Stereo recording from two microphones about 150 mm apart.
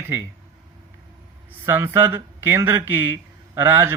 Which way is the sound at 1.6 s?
15° right (ahead or behind).